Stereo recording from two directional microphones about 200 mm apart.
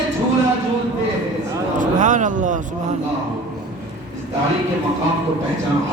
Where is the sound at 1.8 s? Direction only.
40° right (ahead or behind).